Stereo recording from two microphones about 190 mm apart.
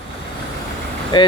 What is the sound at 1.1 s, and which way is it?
Speech, 25° left (ahead or behind).